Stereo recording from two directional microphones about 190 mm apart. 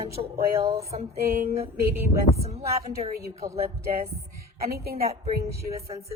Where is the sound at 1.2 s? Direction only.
50° right (ahead or behind).